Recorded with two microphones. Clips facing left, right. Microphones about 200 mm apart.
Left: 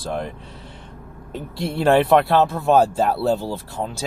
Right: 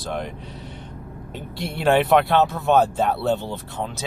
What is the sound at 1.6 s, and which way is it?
Speech, 30° left (ahead or behind).